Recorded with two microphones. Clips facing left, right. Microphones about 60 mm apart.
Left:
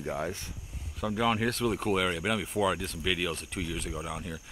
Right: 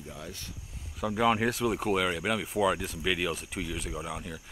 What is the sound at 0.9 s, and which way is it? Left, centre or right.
Speech, centre.